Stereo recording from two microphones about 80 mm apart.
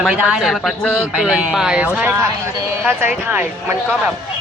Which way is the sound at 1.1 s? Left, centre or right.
Centre.